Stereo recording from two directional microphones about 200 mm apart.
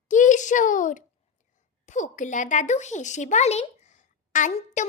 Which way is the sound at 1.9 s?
40° left (ahead or behind).